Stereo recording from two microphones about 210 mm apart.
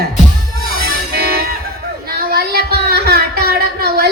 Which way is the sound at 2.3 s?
50° right (ahead or behind).